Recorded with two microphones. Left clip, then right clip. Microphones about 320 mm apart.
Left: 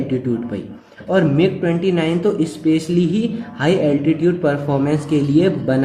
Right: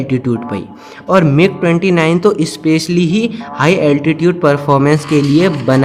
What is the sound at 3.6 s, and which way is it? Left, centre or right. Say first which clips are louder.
Speech: right 5 dB; right.